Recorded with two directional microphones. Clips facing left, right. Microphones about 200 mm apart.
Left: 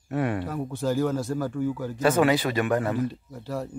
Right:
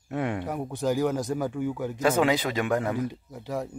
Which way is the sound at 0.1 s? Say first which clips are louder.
Left 2 dB; 15° right (ahead or behind).